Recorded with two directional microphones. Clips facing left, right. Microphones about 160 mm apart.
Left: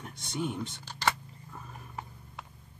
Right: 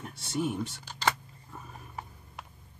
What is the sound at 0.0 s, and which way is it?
Speech, 5° right (ahead or behind).